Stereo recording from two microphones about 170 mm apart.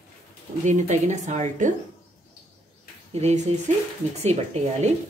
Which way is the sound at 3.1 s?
40° right (ahead or behind).